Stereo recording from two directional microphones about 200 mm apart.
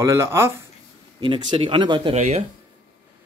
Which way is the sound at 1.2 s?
25° right (ahead or behind).